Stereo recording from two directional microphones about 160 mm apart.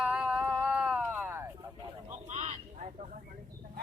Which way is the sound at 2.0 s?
45° right (ahead or behind).